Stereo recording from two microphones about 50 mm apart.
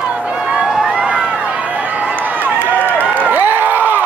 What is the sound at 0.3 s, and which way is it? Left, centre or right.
Run, right.